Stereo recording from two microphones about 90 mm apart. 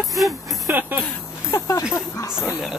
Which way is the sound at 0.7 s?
20° right (ahead or behind).